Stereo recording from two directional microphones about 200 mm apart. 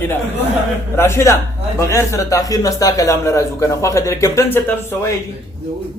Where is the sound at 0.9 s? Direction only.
10° left (ahead or behind).